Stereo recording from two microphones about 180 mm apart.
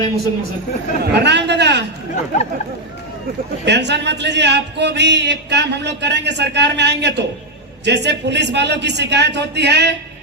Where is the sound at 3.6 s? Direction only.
70° right (ahead or behind).